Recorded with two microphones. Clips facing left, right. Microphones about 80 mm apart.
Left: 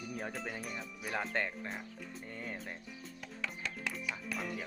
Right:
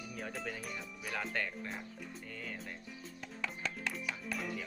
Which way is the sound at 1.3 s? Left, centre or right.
Left.